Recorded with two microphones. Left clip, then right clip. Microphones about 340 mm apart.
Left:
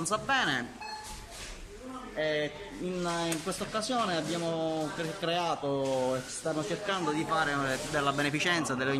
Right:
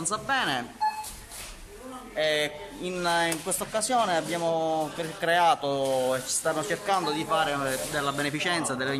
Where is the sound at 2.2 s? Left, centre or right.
Right.